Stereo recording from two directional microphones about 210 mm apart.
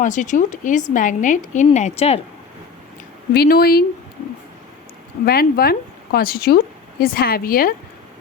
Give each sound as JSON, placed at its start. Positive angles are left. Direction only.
{"t": 0.0, "sound": "speech", "side_deg": 35}
{"t": 3.3, "sound": "speech", "side_deg": 45}
{"t": 5.2, "sound": "speech", "side_deg": 45}